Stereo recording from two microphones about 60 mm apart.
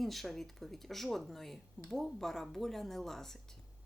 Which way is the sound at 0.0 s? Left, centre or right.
Centre.